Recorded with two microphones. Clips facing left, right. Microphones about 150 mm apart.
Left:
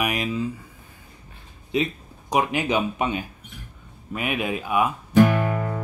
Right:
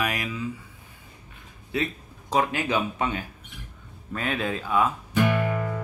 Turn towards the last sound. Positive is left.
turn(degrees=40)  # may be behind; listen again after turning